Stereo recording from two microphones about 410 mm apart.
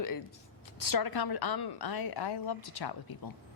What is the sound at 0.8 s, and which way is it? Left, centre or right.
A woman's voice, left.